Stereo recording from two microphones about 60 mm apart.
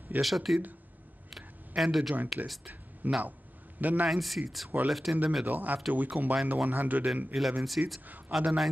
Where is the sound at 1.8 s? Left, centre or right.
Centre.